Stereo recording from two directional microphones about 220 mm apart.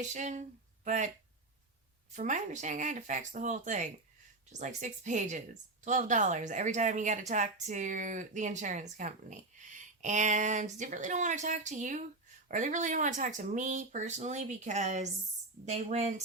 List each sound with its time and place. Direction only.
0.0 s speech: 35° right (ahead or behind)
2.1 s speech: 35° right (ahead or behind)